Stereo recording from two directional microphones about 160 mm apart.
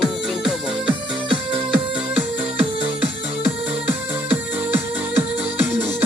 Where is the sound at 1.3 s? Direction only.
30° right (ahead or behind).